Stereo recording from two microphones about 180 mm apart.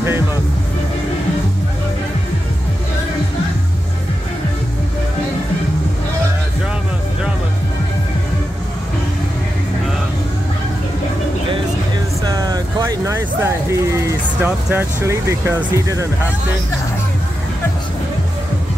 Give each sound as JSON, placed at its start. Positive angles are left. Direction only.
{"t": 12.2, "sound": "vehicle", "side_deg": -20}